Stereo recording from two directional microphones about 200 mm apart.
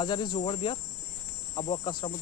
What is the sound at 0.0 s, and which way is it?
Cricket, 25° left (ahead or behind).